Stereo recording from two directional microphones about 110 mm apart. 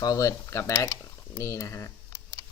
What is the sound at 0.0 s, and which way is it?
Speech, 30° left (ahead or behind).